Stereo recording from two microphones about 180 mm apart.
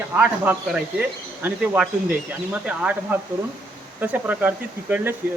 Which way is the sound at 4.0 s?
10° right (ahead or behind).